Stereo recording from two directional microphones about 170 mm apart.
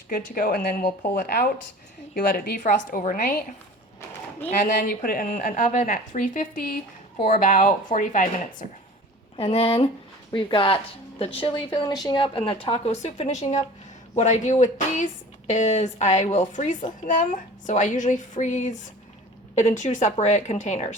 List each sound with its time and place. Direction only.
0.1 s speech: 55° left (ahead or behind)
4.8 s a woman's voice: 55° left (ahead or behind)
9.3 s a woman's voice: 35° left (ahead or behind)